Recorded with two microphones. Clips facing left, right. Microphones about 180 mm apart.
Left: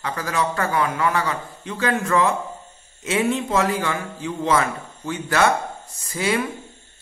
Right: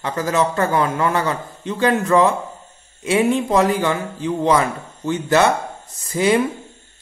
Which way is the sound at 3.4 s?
15° right (ahead or behind).